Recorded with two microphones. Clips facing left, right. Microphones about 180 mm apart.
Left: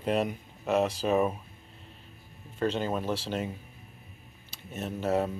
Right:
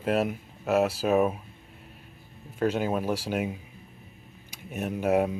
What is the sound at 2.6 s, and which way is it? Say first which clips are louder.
Speech: right 3 dB; 10° right (ahead or behind).